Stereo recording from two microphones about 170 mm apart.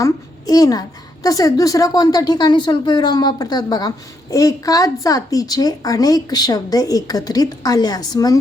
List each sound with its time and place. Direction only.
0.0 s a woman's voice: 20° left (ahead or behind)